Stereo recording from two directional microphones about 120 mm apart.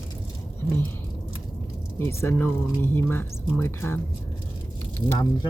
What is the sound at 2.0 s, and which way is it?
Speech, 25° left (ahead or behind).